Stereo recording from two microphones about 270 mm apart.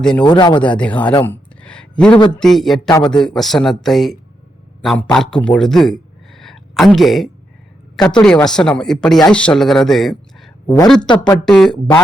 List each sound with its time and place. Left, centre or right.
0.0 s speech: centre
0.3 s speech: centre
0.6 s speech: centre
1.2 s a sound: centre
2.1 s speech: centre
2.4 s a man's voice: centre